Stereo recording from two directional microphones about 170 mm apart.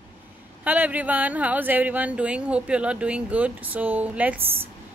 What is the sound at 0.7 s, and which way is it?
Speech, 10° right (ahead or behind).